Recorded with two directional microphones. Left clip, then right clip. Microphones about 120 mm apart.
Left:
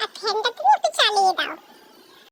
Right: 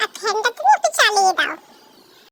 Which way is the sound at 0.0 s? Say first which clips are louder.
Right 4 dB; 15° right (ahead or behind).